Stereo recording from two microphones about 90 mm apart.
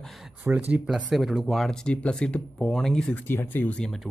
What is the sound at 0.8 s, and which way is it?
Speech, 5° right (ahead or behind).